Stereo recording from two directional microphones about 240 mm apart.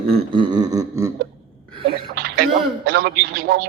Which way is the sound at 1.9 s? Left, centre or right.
Right.